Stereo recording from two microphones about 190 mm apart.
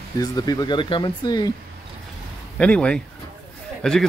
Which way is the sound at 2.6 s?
5° left (ahead or behind).